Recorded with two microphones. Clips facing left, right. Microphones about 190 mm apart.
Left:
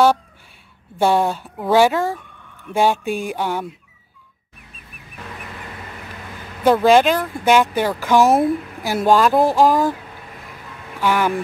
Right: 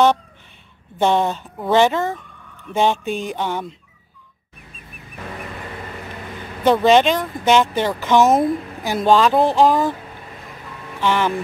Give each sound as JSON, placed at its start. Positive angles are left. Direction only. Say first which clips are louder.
{"t": 0.9, "sound": "speech", "louder": "left 1 dB", "side_deg": 10}
{"t": 6.6, "sound": "speech", "louder": "left 1 dB", "side_deg": 5}
{"t": 9.4, "sound": "speech", "louder": "even", "side_deg": -20}
{"t": 11.0, "sound": "speech", "louder": "left 1 dB", "side_deg": 10}